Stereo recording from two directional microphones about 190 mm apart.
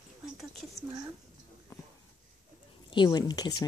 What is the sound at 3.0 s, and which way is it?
Speech, 20° left (ahead or behind).